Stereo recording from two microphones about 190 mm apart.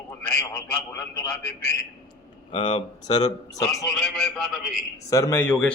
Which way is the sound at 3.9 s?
Centre (ahead or behind).